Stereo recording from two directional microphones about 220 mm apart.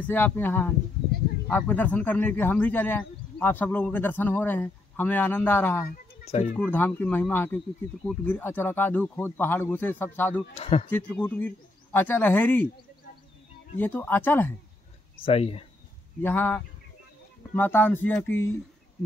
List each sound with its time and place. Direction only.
0.0 s speech: 10° left (ahead or behind)
6.2 s speech: 30° left (ahead or behind)
6.5 s speech: 10° left (ahead or behind)
10.5 s speech: 25° left (ahead or behind)
10.9 s speech: 5° left (ahead or behind)
13.7 s speech: 10° left (ahead or behind)
15.2 s speech: 25° left (ahead or behind)
16.2 s speech: 10° left (ahead or behind)